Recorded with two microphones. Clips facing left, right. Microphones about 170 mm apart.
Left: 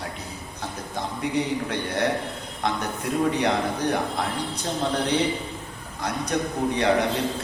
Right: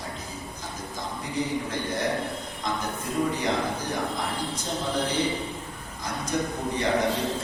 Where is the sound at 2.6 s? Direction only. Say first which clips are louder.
Left 4 dB; 65° left (ahead or behind).